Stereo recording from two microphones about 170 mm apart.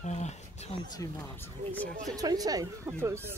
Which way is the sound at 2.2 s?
20° right (ahead or behind).